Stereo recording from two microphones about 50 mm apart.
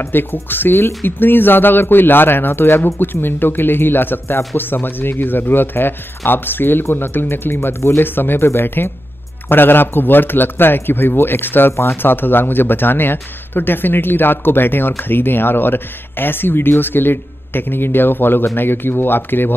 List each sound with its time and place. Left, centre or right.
0.1 s speech: left
8.0 s speech: left
11.7 s speech: left
12.0 s speech: left